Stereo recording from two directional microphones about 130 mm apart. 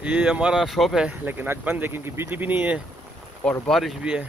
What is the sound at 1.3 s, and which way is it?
Speech, 15° right (ahead or behind).